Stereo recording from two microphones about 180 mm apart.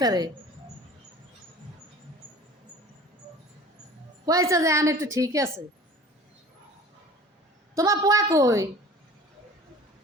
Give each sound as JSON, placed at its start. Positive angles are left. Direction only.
{"t": 0.0, "sound": "speech", "side_deg": -20}
{"t": 4.3, "sound": "a woman's voice", "side_deg": -20}
{"t": 7.8, "sound": "a woman's voice", "side_deg": -20}